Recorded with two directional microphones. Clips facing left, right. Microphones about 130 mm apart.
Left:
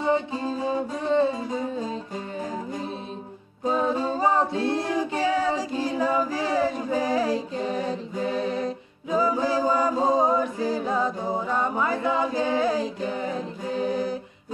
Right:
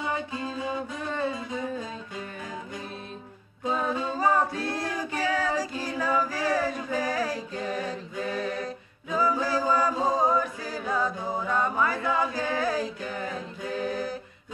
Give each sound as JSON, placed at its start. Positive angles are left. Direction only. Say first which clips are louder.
{"t": 0.0, "sound": "music", "louder": "left 7 dB", "side_deg": 30}
{"t": 1.0, "sound": "female singing", "louder": "left 9 dB", "side_deg": 20}
{"t": 1.3, "sound": "music", "louder": "left 3 dB", "side_deg": 35}
{"t": 3.7, "sound": "female singing", "louder": "left 4 dB", "side_deg": 30}
{"t": 10.0, "sound": "a capella", "louder": "left 3 dB", "side_deg": 20}